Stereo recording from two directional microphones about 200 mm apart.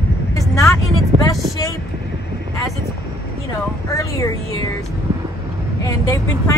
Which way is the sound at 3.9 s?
15° left (ahead or behind).